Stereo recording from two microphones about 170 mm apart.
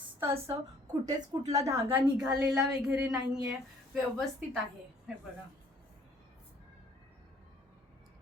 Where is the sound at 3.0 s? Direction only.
20° right (ahead or behind).